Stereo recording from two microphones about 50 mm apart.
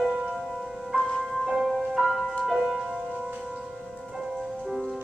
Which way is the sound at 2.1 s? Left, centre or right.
Centre.